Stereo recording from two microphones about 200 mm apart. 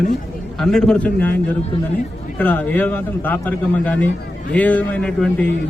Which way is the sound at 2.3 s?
10° left (ahead or behind).